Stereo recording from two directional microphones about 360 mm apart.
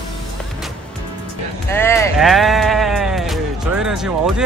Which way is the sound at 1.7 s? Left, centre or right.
Centre.